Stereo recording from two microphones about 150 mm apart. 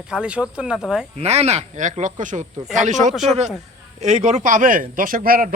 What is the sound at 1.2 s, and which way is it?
Speech, 45° right (ahead or behind).